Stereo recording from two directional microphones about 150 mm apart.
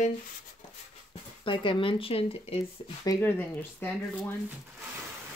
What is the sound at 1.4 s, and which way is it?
Speech, 35° left (ahead or behind).